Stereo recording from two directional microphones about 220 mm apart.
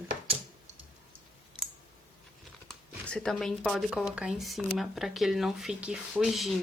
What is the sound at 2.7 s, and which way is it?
A woman's voice, 5° left (ahead or behind).